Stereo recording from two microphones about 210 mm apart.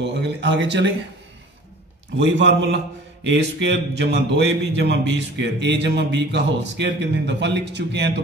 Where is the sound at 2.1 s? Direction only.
55° right (ahead or behind).